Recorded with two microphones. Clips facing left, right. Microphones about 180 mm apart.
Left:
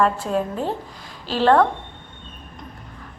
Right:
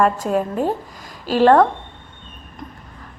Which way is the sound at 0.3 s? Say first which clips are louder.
Right 4 dB; 10° right (ahead or behind).